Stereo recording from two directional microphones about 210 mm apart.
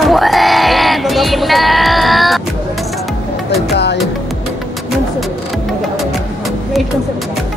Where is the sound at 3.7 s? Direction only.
55° left (ahead or behind).